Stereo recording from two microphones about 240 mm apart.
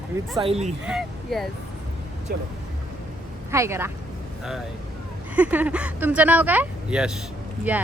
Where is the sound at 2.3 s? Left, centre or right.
Right.